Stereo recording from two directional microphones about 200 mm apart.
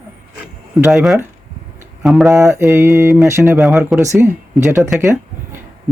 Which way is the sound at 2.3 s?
15° right (ahead or behind).